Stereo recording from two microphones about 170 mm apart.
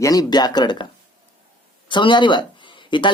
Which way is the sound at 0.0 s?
20° left (ahead or behind).